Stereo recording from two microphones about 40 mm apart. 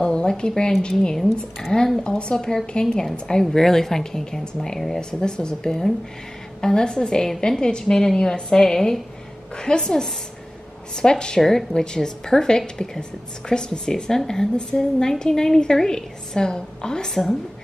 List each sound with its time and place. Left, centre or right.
0.0 s a woman's voice: left
5.2 s a woman's voice: centre
17.1 s a woman's voice: centre